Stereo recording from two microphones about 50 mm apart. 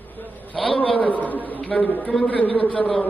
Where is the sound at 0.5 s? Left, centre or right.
Centre.